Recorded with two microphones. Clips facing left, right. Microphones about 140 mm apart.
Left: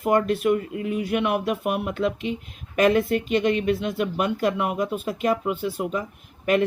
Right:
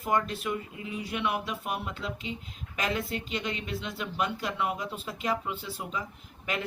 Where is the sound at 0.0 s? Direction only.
60° left (ahead or behind).